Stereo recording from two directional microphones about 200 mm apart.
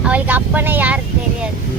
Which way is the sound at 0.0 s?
10° right (ahead or behind).